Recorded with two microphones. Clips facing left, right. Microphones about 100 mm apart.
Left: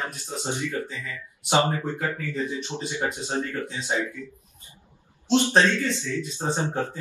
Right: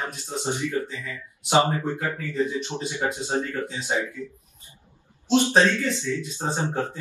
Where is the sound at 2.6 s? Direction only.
15° right (ahead or behind).